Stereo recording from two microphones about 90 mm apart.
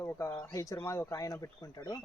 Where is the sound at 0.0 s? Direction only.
25° left (ahead or behind).